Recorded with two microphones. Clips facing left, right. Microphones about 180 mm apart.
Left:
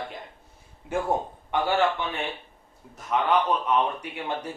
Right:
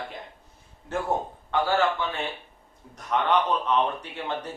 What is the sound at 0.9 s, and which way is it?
Speech, 10° left (ahead or behind).